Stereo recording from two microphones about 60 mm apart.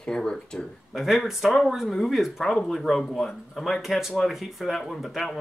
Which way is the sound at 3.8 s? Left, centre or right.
Centre.